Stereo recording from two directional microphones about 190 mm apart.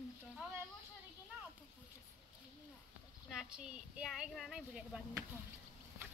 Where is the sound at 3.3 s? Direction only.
5° right (ahead or behind).